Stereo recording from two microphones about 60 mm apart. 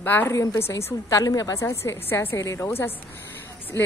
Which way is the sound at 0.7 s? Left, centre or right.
Left.